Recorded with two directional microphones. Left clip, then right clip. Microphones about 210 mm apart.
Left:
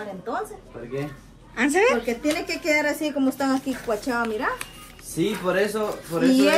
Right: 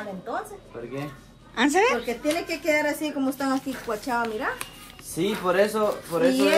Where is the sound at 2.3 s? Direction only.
30° left (ahead or behind).